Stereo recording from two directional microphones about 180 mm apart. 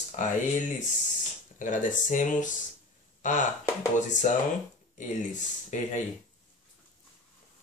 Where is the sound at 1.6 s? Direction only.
45° left (ahead or behind).